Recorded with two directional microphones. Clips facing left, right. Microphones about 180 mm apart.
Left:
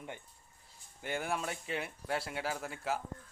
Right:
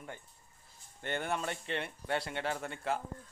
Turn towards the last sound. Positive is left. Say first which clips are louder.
# right 1 dB
turn(degrees=5)  # may be behind; listen again after turning